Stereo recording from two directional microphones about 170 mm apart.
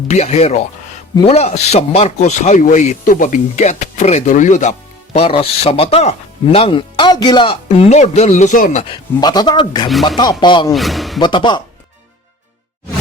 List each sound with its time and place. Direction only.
0.1 s speech: 40° left (ahead or behind)
5.1 s speech: 35° left (ahead or behind); by 8.8 s 50° left (ahead or behind)
8.8 s speech: 25° left (ahead or behind)
10.7 s speech: centre (ahead or behind)
11.2 s speech: 25° left (ahead or behind)